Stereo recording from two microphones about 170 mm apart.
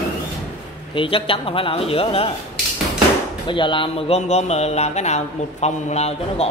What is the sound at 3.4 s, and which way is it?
A man's voice, 30° left (ahead or behind).